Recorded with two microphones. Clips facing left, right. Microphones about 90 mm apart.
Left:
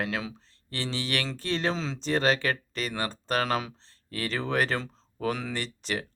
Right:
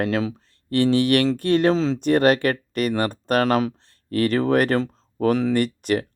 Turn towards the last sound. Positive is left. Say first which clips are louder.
# right 12 dB
turn(degrees=-50)  # may be behind; listen again after turning